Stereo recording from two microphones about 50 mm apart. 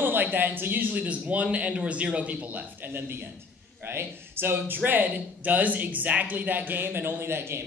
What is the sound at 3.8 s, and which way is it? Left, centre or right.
A woman's voice, right.